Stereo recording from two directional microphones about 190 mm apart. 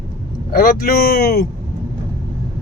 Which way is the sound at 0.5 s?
50° left (ahead or behind).